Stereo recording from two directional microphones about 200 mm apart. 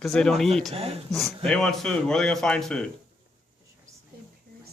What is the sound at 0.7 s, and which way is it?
Speech, 30° right (ahead or behind).